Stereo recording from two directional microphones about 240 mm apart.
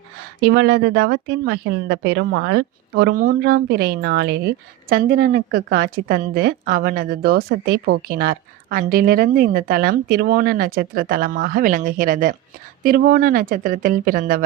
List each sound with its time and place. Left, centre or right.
0.4 s speech: right